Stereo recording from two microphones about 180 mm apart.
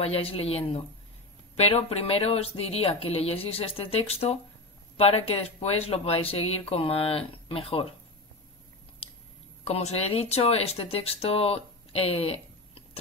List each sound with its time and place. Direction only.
0.0 s speech: 30° left (ahead or behind)
9.7 s speech: 35° left (ahead or behind)